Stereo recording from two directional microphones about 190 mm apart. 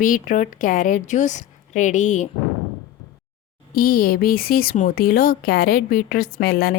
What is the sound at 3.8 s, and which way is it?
Speech, 50° left (ahead or behind).